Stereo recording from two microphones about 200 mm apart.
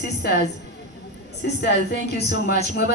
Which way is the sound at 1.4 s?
50° left (ahead or behind).